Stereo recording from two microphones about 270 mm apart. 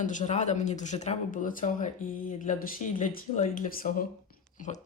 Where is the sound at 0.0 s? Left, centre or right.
Left.